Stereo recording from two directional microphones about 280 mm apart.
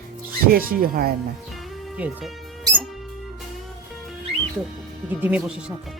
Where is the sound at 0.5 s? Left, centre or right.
Right.